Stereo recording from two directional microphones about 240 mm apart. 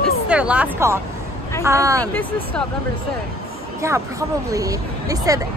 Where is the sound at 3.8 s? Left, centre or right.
Centre.